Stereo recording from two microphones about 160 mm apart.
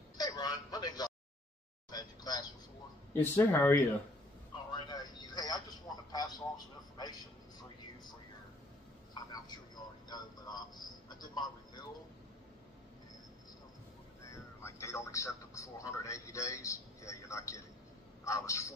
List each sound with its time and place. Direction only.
0.2 s speech: 25° left (ahead or behind)
4.6 s a sound: 25° left (ahead or behind)
6.1 s a man's voice: 25° left (ahead or behind)
9.1 s a sound: 25° left (ahead or behind)
10.0 s a man's voice: 25° left (ahead or behind)
14.2 s a man's voice: 20° left (ahead or behind)